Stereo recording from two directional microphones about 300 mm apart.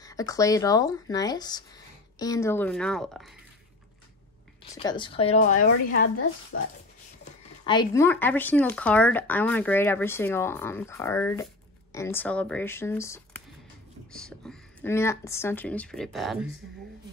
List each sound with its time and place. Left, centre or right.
0.0 s speech: centre
4.7 s speech: centre; by 6.2 s left
7.6 s speech: centre